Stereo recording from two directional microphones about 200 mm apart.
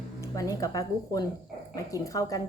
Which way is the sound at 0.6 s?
20° left (ahead or behind).